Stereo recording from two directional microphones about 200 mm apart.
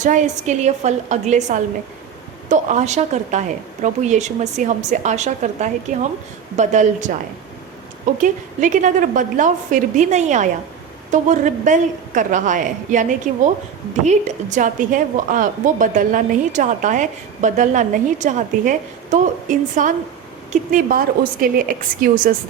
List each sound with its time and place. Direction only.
0.0 s a woman's voice: 40° right (ahead or behind)
8.2 s a woman's voice: 40° right (ahead or behind)